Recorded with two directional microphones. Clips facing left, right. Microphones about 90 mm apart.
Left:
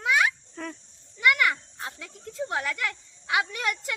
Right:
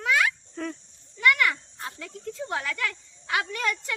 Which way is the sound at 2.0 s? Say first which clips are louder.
Left 1 dB; 5° left (ahead or behind).